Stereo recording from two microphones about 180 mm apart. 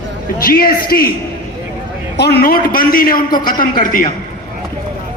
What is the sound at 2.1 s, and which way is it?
A man's voice, 65° left (ahead or behind).